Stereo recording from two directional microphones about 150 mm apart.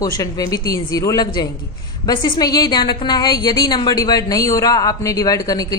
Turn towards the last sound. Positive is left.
turn(degrees=25)  # may be behind; listen again after turning